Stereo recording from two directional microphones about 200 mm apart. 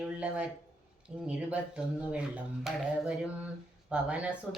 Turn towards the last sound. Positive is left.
turn(degrees=-5)  # may be behind; listen again after turning